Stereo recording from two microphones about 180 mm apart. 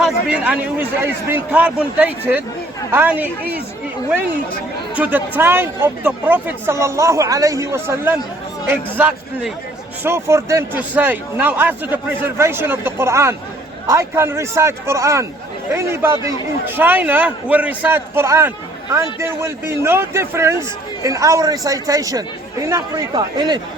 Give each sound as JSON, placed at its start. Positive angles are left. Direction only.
{"t": 0.0, "sound": "a man's voice", "side_deg": -5}
{"t": 4.9, "sound": "a man's voice", "side_deg": -10}